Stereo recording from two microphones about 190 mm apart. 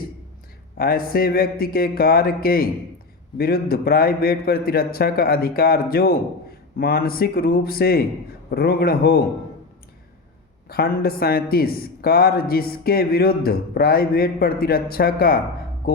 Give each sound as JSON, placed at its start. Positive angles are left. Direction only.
{"t": 0.8, "sound": "a man's voice", "side_deg": 50}
{"t": 10.7, "sound": "a man's voice", "side_deg": 50}